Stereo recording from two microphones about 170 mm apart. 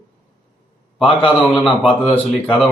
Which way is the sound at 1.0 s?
30° left (ahead or behind).